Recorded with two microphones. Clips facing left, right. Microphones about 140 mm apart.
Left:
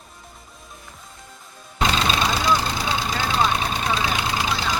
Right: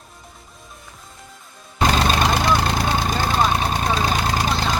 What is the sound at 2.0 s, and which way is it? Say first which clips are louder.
Vehicle: right 3 dB; 50° right (ahead or behind).